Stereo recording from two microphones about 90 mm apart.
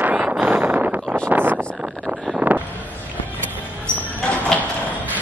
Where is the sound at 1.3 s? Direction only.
20° right (ahead or behind).